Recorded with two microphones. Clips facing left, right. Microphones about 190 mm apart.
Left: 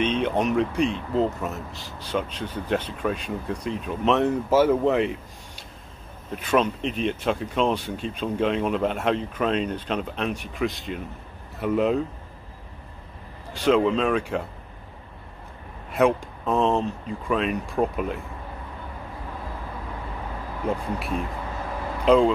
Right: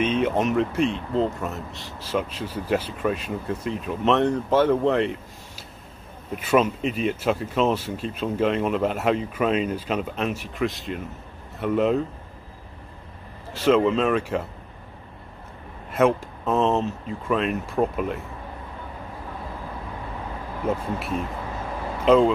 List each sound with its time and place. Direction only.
0.0 s speech: 5° right (ahead or behind)
13.5 s speech: centre (ahead or behind)
15.9 s speech: centre (ahead or behind)
20.6 s speech: centre (ahead or behind)